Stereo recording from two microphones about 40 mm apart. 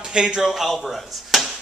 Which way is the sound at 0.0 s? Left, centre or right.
Centre.